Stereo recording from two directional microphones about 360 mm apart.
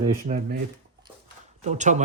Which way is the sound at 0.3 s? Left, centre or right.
Right.